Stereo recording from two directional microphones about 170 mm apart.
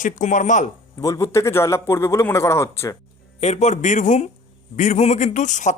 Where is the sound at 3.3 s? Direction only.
40° left (ahead or behind).